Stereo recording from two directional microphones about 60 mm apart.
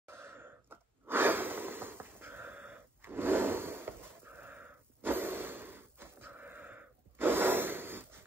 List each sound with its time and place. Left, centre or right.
0.0 s gasp: right